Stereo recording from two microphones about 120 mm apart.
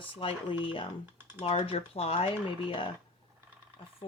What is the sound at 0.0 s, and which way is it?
Speech, 45° left (ahead or behind).